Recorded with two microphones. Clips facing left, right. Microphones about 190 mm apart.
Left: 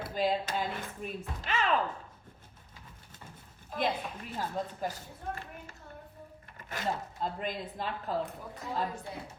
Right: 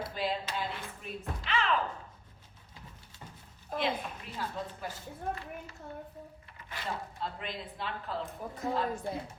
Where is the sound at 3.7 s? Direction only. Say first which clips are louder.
Even; 50° right (ahead or behind).